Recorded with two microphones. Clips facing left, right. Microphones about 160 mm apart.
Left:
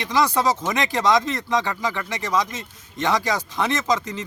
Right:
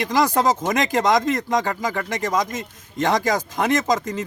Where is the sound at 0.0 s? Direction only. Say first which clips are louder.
Right 2 dB; 45° right (ahead or behind).